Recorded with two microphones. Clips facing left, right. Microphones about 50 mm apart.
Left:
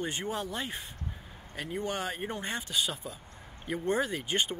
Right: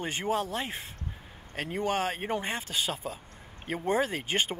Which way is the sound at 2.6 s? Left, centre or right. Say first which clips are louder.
Right 1 dB; right.